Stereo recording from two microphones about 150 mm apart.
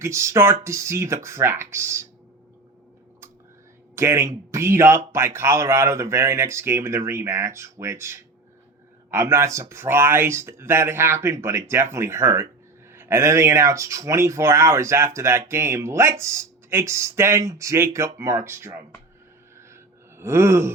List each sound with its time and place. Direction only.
0.0 s speech: 20° right (ahead or behind)
3.9 s speech: 20° right (ahead or behind)
19.5 s gasp: 15° right (ahead or behind)